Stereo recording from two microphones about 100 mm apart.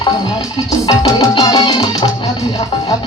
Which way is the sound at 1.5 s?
45° left (ahead or behind).